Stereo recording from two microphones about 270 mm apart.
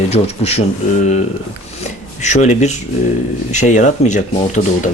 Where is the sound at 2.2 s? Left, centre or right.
Left.